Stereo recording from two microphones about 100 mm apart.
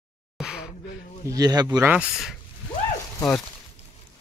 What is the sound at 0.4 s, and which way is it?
Gasp, 5° right (ahead or behind).